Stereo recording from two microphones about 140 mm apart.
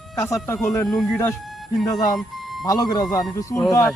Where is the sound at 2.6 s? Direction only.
25° left (ahead or behind).